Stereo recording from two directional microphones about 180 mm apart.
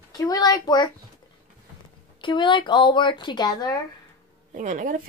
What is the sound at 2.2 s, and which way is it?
Speech, 25° left (ahead or behind).